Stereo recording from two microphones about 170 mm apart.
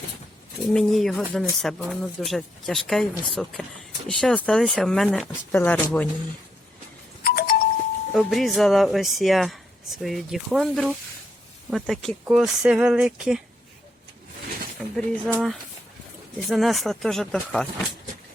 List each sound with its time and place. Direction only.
0.7 s speech: centre (ahead or behind)
7.3 s doorbell: 60° left (ahead or behind)
8.1 s speech: centre (ahead or behind)
14.8 s speech: 5° left (ahead or behind)